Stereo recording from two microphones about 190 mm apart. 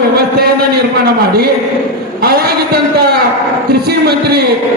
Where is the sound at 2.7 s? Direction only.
55° right (ahead or behind).